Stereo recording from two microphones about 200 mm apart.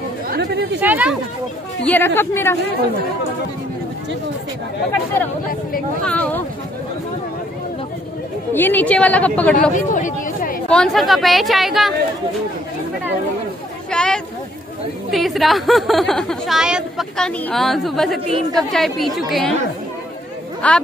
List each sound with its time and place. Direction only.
0.3 s chatter: 55° right (ahead or behind)
0.7 s speech: 10° right (ahead or behind)
1.9 s a woman's voice: 10° left (ahead or behind)
6.0 s a woman's voice: 5° left (ahead or behind)
8.5 s a woman's voice: 10° left (ahead or behind)
9.6 s speech: 40° left (ahead or behind)
10.7 s speech: centre (ahead or behind)
13.8 s vehicle: 5° left (ahead or behind)
15.0 s speech: centre (ahead or behind)
18.2 s a woman's voice: 25° right (ahead or behind)
18.6 s speech: centre (ahead or behind)
20.6 s a woman's voice: 5° left (ahead or behind)